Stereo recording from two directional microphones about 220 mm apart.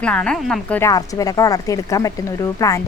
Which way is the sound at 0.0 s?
5° left (ahead or behind).